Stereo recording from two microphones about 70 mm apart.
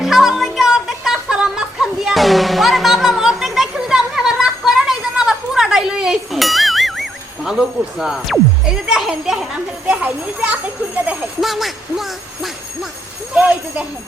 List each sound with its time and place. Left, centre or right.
0.0 s a sound: centre
9.8 s a child's voice: centre
11.3 s jingle bell: centre
13.3 s speech: centre